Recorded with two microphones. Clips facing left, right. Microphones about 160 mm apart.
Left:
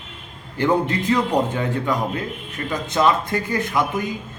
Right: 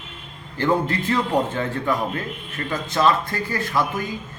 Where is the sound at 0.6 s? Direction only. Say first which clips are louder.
Left 2 dB; 20° left (ahead or behind).